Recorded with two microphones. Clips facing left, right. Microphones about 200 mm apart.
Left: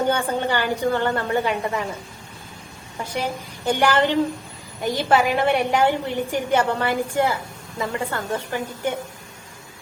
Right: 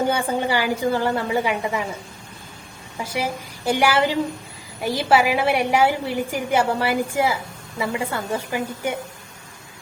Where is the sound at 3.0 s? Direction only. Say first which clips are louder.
Right 1 dB; 10° right (ahead or behind).